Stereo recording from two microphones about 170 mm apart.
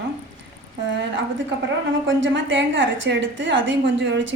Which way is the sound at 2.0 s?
90° right.